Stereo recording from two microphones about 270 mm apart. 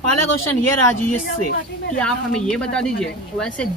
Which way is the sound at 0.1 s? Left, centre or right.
Left.